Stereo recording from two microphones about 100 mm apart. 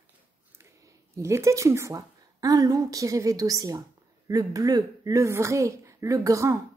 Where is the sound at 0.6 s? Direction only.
30° right (ahead or behind).